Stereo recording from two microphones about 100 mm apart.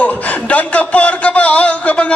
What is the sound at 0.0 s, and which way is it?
A man's voice, 15° left (ahead or behind).